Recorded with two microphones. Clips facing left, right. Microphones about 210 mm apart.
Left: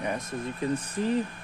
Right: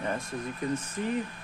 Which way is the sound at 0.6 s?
30° left (ahead or behind).